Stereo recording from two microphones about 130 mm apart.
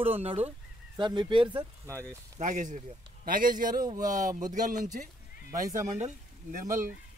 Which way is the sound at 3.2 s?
90° right.